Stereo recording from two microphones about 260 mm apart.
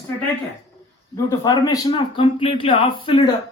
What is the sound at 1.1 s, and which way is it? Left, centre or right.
Speech, centre.